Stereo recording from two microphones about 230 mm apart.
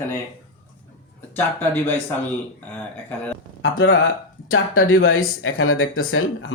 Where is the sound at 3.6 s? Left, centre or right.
Left.